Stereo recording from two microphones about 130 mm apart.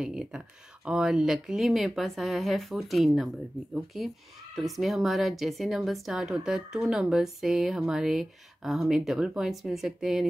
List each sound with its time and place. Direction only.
0.0 s a woman's voice: 5° right (ahead or behind)